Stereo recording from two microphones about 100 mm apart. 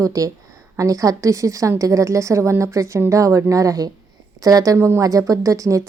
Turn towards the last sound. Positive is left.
turn(degrees=-35)  # may be behind; listen again after turning